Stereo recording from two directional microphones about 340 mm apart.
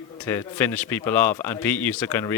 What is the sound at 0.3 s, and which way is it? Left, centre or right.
A man's voice, centre.